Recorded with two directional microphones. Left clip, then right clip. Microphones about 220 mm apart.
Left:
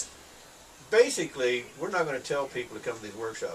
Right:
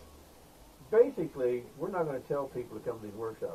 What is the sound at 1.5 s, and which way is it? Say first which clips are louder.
Speech: left 4 dB; 25° left (ahead or behind).